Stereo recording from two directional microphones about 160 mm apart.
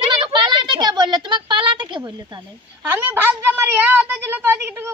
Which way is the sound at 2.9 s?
10° right (ahead or behind).